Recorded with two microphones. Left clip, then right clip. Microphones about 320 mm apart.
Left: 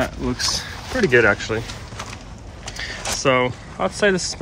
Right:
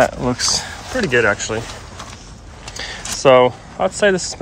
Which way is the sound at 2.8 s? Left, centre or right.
Centre.